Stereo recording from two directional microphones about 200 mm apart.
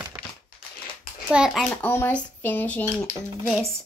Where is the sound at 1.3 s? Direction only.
Centre (ahead or behind).